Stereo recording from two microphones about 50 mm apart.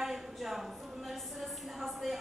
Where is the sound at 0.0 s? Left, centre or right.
Centre.